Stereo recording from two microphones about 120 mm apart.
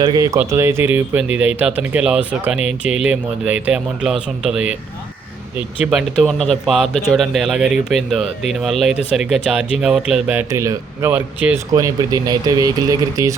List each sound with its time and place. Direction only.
0.0 s speech: 35° right (ahead or behind)
0.3 s speech: 20° right (ahead or behind)
5.8 s speech: 5° right (ahead or behind)
10.3 s speech: 25° right (ahead or behind)
11.1 s speech: 10° right (ahead or behind)
11.7 s speech: 35° right (ahead or behind)